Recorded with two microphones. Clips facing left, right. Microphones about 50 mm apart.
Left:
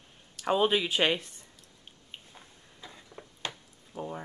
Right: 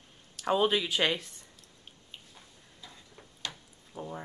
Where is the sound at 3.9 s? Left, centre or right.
Centre.